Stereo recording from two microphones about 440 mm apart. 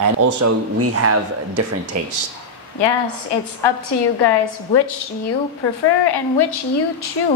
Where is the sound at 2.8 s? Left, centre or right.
Left.